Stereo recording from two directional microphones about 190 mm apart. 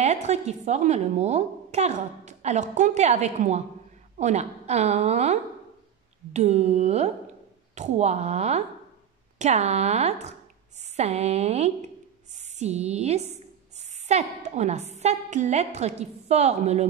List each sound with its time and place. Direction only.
0.0 s a woman's voice: 35° right (ahead or behind)